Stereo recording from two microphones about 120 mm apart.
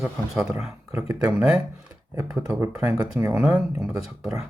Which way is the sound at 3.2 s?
20° right (ahead or behind).